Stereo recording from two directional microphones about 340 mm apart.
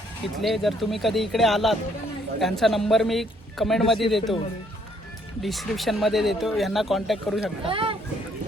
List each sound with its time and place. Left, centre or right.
0.4 s speech: centre
5.4 s speech: centre
7.6 s speech: centre